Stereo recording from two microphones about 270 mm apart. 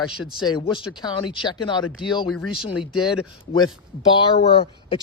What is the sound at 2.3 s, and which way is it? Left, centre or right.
Speech, centre.